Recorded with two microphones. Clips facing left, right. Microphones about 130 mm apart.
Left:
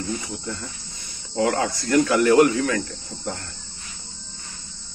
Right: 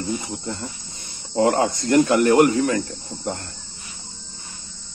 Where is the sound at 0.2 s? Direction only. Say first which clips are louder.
Right 2 dB; 25° right (ahead or behind).